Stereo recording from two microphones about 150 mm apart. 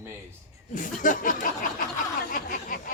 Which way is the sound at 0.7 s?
60° left (ahead or behind).